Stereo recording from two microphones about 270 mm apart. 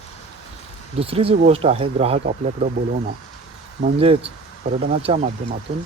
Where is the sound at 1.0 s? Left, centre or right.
Right.